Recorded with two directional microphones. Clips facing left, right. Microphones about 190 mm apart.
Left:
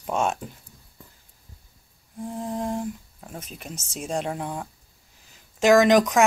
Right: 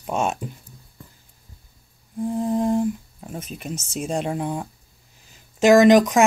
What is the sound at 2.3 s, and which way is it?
Humming, 5° right (ahead or behind).